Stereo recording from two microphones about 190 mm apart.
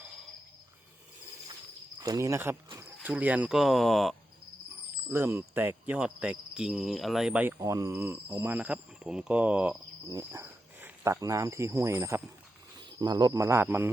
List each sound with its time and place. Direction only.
2.0 s cricket: 20° right (ahead or behind)
3.0 s speech: 10° right (ahead or behind)
5.0 s cricket: 15° right (ahead or behind)
10.1 s speech: 15° right (ahead or behind)
13.0 s cricket: 20° right (ahead or behind)